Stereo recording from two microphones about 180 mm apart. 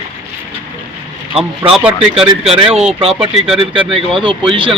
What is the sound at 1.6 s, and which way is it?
Speech, 15° right (ahead or behind).